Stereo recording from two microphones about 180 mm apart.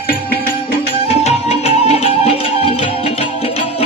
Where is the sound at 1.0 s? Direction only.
35° left (ahead or behind).